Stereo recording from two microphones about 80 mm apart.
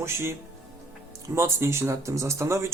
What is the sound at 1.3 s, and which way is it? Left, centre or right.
Speech, right.